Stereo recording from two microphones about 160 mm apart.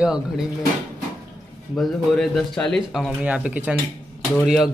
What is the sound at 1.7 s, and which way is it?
Speech, centre (ahead or behind).